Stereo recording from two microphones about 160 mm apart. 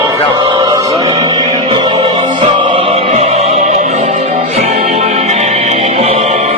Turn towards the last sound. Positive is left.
turn(degrees=-45)  # may be behind; listen again after turning